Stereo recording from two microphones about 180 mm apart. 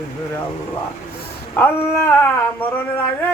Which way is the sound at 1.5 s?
10° left (ahead or behind).